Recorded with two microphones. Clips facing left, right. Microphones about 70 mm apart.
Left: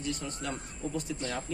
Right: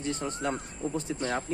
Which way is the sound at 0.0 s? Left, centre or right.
Right.